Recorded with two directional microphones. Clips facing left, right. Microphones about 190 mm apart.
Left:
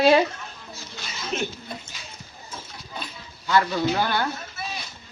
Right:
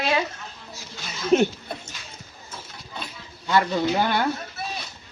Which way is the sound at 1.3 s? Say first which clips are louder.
Right 11 dB; 50° right (ahead or behind).